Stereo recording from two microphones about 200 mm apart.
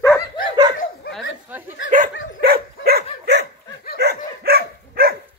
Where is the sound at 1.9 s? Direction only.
40° right (ahead or behind).